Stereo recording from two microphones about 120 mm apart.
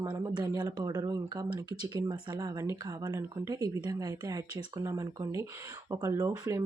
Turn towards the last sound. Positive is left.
turn(degrees=-25)  # may be behind; listen again after turning